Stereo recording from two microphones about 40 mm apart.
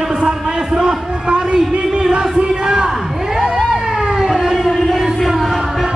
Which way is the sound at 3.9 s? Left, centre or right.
Centre.